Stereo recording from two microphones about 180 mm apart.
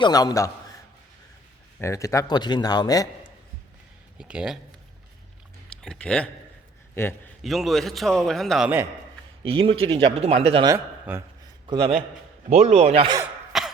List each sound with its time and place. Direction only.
0.0 s speech: 20° left (ahead or behind)
1.8 s speech: 15° left (ahead or behind)
4.2 s a man's voice: 5° right (ahead or behind)
5.6 s a man's voice: 5° left (ahead or behind)
7.4 s a man's voice: centre (ahead or behind)
9.4 s speech: 30° right (ahead or behind)
11.1 s speech: 10° right (ahead or behind)
12.5 s speech: 35° right (ahead or behind)
13.5 s cough: centre (ahead or behind)